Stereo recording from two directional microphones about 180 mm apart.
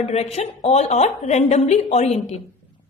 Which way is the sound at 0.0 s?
35° left (ahead or behind).